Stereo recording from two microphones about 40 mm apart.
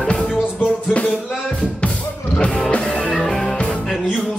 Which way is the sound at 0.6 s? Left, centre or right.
Left.